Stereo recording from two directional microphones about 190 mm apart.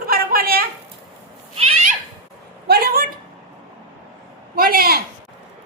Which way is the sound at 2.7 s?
55° right (ahead or behind).